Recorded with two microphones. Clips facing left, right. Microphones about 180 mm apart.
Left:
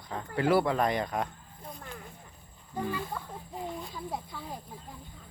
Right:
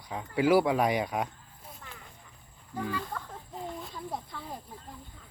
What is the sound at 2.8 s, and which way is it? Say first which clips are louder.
Speech: left 1 dB; 10° left (ahead or behind).